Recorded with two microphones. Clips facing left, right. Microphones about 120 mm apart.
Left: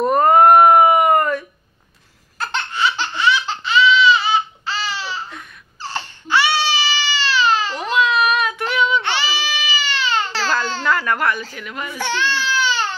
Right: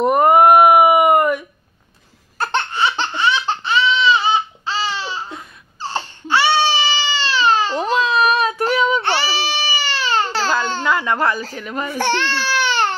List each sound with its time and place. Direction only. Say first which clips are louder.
0.0 s a sound: right 1 dB; 15° right (ahead or behind)
2.5 s laughter: right 2 dB; 25° right (ahead or behind)
3.8 s baby cry: left 2 dB; 30° right (ahead or behind)
10.4 s babbling: right 1 dB; 20° right (ahead or behind); by 12.0 s 35° right (ahead or behind)
12.0 s baby cry: right 2 dB; 60° right (ahead or behind)